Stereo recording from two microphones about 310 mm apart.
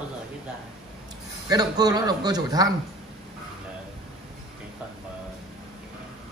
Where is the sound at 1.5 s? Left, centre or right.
Centre.